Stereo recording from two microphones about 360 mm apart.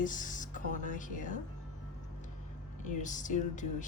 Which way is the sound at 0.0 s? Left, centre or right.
Left.